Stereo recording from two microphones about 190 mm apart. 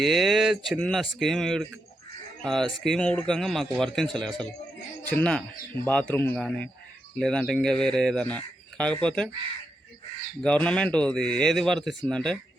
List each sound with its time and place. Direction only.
0.0 s speech: centre (ahead or behind)
10.4 s speech: 5° left (ahead or behind)